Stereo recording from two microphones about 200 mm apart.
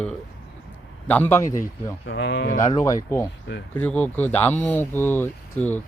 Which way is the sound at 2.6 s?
15° left (ahead or behind).